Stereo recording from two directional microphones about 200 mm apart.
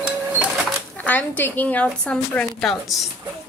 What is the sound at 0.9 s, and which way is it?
A woman's voice, 10° left (ahead or behind).